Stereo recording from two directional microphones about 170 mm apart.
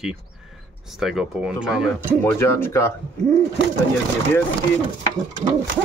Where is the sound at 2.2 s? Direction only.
15° left (ahead or behind).